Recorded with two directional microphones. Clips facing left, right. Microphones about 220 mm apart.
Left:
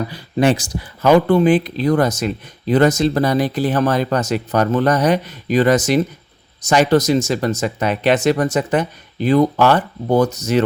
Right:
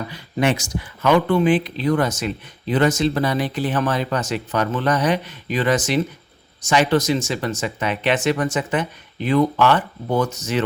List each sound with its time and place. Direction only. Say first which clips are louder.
0.1 s speech: left 4 dB; 35° left (ahead or behind)